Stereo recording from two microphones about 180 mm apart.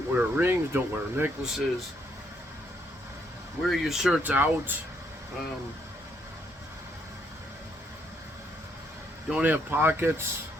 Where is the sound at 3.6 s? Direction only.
Centre (ahead or behind).